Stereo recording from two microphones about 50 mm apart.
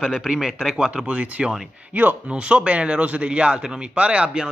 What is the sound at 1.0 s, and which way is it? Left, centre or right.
A man's voice, right.